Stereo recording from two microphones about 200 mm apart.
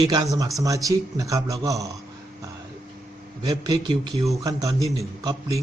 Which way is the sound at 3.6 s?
20° right (ahead or behind).